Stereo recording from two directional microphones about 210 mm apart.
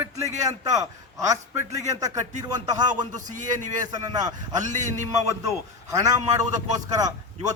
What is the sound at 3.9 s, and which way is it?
Speech, 20° right (ahead or behind).